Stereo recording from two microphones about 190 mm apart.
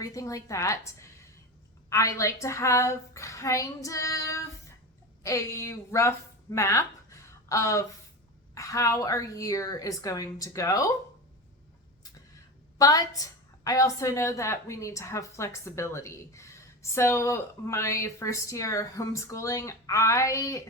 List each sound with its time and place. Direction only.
0.0 s a woman's voice: 15° left (ahead or behind)
12.8 s a woman's voice: 20° left (ahead or behind)